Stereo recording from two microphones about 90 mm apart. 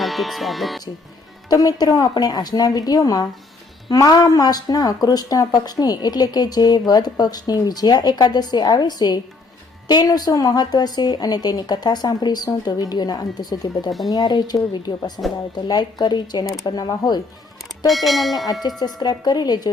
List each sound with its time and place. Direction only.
0.0 s speech: centre (ahead or behind)
1.5 s speech: 45° left (ahead or behind)
17.8 s speech: centre (ahead or behind)
18.9 s speech: 50° left (ahead or behind)